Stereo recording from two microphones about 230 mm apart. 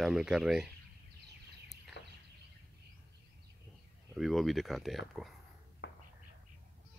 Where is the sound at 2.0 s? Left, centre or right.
Left.